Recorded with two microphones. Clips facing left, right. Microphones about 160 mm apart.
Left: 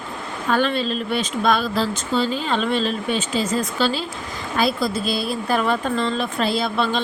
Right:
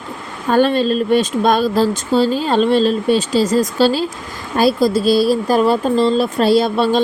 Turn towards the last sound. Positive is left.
turn(degrees=-40)  # may be behind; listen again after turning